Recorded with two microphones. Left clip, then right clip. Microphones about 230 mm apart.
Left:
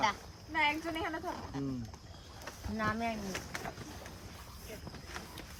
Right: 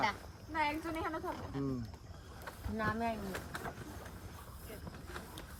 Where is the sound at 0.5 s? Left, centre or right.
Left.